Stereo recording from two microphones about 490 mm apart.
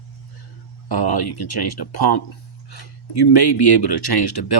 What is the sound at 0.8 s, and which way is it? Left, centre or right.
Speech, left.